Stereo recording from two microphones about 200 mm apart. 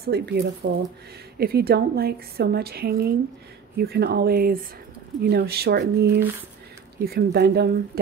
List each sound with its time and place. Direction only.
0.0 s a woman's voice: 50° right (ahead or behind)